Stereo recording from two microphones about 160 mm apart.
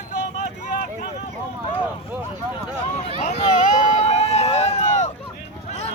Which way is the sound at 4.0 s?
40° left (ahead or behind).